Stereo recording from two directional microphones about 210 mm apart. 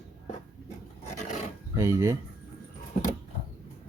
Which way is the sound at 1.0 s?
35° left (ahead or behind).